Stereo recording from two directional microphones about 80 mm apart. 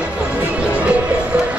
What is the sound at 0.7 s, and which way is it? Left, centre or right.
Music, centre.